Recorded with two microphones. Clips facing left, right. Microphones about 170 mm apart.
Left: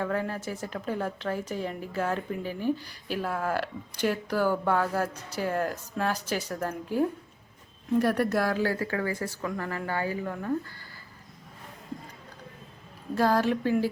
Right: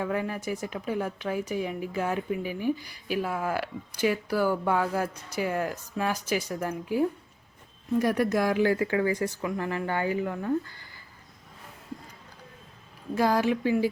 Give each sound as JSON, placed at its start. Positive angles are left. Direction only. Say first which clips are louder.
{"t": 0.0, "sound": "a woman's voice", "louder": "even", "side_deg": -15}
{"t": 13.1, "sound": "a woman's voice", "louder": "even", "side_deg": -15}